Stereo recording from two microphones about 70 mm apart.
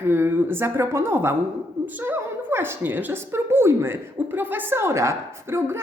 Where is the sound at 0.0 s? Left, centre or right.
Right.